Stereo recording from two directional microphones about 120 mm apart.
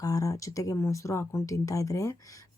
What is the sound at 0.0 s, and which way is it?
Speech, 30° left (ahead or behind).